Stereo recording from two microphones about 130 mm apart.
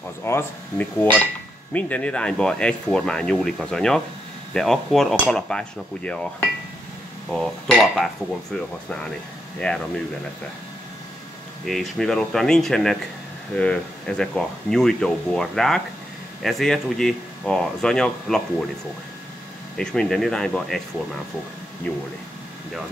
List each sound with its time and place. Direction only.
0.2 s speech: 15° left (ahead or behind)
11.6 s speech: centre (ahead or behind)
19.8 s speech: 5° left (ahead or behind)
21.8 s speech: 10° left (ahead or behind)